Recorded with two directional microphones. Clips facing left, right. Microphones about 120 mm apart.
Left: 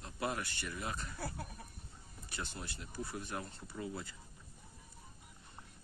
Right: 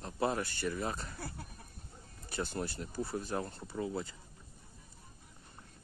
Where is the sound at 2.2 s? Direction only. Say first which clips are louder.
Right 8 dB; 40° right (ahead or behind).